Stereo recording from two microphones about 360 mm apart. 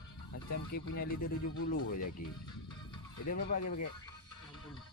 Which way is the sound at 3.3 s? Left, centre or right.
Left.